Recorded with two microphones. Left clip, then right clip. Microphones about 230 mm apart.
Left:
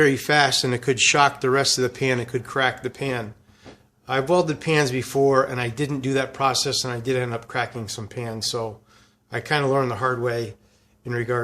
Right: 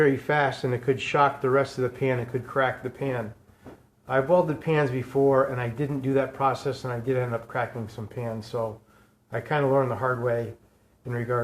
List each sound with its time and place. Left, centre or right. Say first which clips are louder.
0.0 s speech: left 4 dB; left